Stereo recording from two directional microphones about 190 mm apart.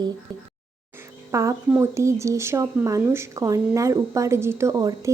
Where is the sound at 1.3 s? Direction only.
15° right (ahead or behind).